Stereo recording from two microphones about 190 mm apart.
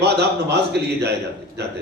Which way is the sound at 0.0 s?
60° right (ahead or behind).